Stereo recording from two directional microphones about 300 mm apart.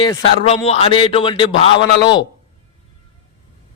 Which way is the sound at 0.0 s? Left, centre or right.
Centre.